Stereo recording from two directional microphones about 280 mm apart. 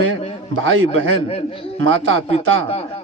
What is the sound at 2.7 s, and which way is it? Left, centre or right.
Speech, left.